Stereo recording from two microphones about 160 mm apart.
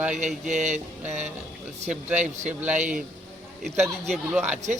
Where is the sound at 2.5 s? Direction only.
10° right (ahead or behind).